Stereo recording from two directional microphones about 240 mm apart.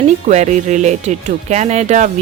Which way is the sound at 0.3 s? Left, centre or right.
Right.